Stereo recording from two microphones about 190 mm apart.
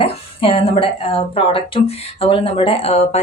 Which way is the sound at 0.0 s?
30° left (ahead or behind).